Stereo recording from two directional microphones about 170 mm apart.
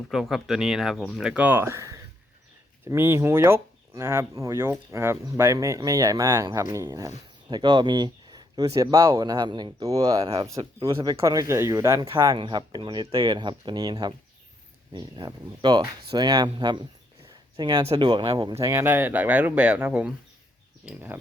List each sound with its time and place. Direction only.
0.1 s speech: centre (ahead or behind); by 16.8 s 25° right (ahead or behind)
17.2 s a sound: 25° right (ahead or behind)
17.8 s speech: 25° right (ahead or behind)
18.6 s speech: 15° right (ahead or behind)